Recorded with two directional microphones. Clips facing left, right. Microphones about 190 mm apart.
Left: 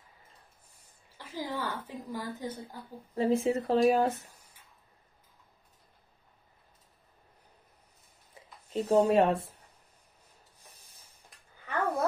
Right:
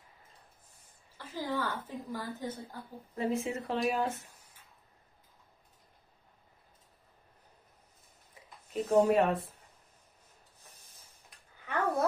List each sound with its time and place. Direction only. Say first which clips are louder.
1.1 s a woman's voice: right 1 dB; 15° left (ahead or behind)
3.2 s speech: left 6 dB; 30° left (ahead or behind)
8.7 s speech: left 2 dB; 35° left (ahead or behind)
11.2 s a sound: right 1 dB; centre (ahead or behind)